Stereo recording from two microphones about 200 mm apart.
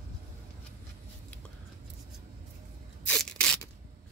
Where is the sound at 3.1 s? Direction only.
5° left (ahead or behind).